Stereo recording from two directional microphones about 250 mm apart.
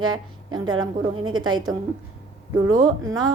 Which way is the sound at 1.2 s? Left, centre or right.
Right.